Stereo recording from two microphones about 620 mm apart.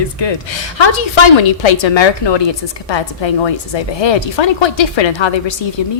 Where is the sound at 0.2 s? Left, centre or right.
Left.